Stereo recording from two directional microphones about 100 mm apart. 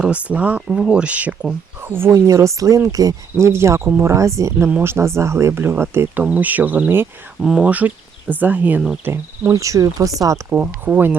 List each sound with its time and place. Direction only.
0.0 s speech: 10° right (ahead or behind)
1.8 s speech: 25° right (ahead or behind)
4.1 s speech: 30° right (ahead or behind)
7.4 s speech: 10° right (ahead or behind)
9.5 s speech: 35° right (ahead or behind)
10.5 s speech: 15° right (ahead or behind)